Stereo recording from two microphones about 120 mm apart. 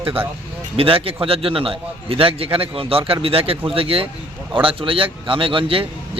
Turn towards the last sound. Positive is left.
turn(degrees=-45)  # may be behind; listen again after turning